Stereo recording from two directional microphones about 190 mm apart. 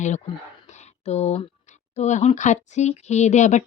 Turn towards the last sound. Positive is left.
turn(degrees=40)  # may be behind; listen again after turning